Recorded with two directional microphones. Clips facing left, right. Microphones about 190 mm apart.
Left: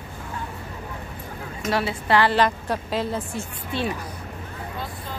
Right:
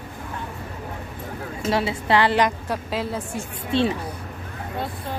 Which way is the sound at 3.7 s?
25° right (ahead or behind).